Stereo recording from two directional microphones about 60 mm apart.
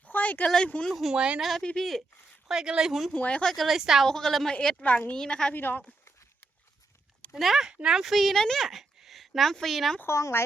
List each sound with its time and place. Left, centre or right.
0.0 s a sound: left
0.4 s speech: centre
1.1 s speech: centre
1.4 s a woman's voice: centre
2.5 s speech: centre
3.1 s a woman's voice: left
3.4 s a woman's voice: centre
4.0 s a woman's voice: centre
4.8 s a woman's voice: left
5.1 s speech: centre
5.5 s speech: left
7.3 s a woman's voice: centre
7.7 s speech: centre
10.1 s speech: left